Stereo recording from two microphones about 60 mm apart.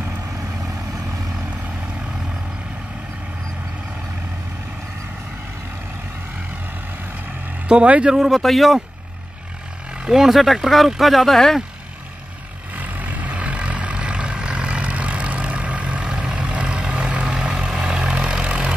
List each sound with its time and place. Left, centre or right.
7.6 s speech: centre
8.2 s speech: centre
10.0 s speech: centre
12.7 s vehicle: right